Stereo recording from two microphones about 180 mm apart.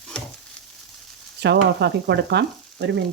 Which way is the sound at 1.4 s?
70° right (ahead or behind).